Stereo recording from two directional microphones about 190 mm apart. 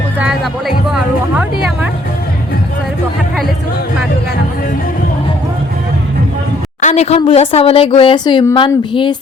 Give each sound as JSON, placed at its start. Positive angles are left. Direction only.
{"t": 0.9, "sound": "speech", "side_deg": -5}
{"t": 6.8, "sound": "a woman's voice", "side_deg": 35}